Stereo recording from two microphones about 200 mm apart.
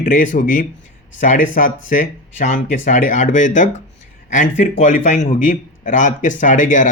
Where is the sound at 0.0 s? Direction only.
40° left (ahead or behind).